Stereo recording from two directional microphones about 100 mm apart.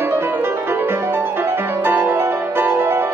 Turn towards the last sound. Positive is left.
turn(degrees=-20)  # may be behind; listen again after turning